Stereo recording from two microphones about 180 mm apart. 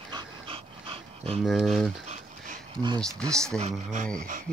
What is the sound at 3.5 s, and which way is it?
Speech, 40° right (ahead or behind).